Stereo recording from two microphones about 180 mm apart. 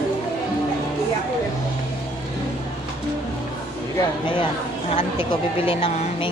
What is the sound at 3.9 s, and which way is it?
Speech, 25° left (ahead or behind).